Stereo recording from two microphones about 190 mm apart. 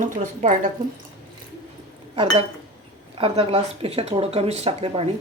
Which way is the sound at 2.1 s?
30° right (ahead or behind).